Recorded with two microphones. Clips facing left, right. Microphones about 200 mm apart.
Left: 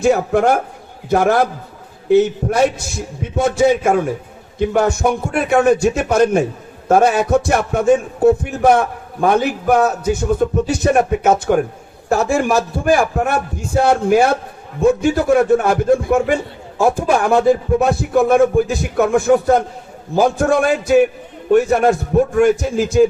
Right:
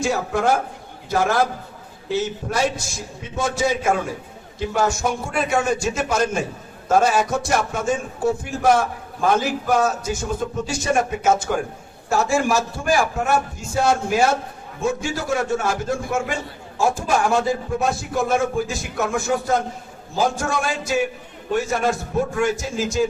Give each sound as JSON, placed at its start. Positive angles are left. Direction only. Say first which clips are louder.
{"t": 0.0, "sound": "a man's voice", "louder": "left 7 dB", "side_deg": 60}